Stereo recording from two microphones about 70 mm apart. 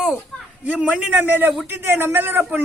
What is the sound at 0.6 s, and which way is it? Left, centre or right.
A man's voice, centre.